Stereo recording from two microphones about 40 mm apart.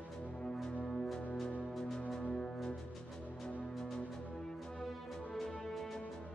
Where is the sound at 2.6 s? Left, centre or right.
Centre.